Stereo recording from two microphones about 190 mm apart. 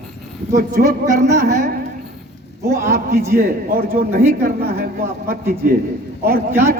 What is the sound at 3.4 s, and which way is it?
A man's voice, 50° right (ahead or behind).